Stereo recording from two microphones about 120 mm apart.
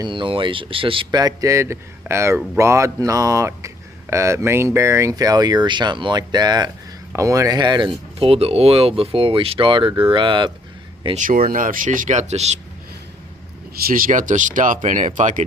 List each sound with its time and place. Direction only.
0.0 s speech: 45° right (ahead or behind)
1.2 s speech: 30° right (ahead or behind)
11.1 s speech: 90° right; by 12.5 s 65° right (ahead or behind)
14.1 s speech: 90° right